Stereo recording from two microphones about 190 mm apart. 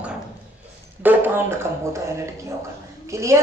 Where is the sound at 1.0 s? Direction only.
10° right (ahead or behind).